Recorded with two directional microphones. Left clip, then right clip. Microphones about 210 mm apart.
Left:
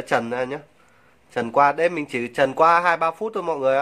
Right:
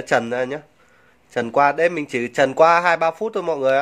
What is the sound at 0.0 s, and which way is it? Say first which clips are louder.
A man's voice: right 3 dB; 15° right (ahead or behind).